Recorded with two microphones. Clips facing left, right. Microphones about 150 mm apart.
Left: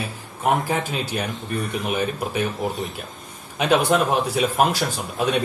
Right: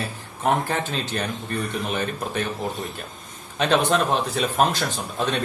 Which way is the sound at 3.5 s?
10° left (ahead or behind).